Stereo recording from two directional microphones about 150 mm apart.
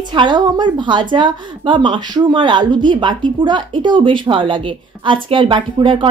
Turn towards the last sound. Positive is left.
turn(degrees=-35)  # may be behind; listen again after turning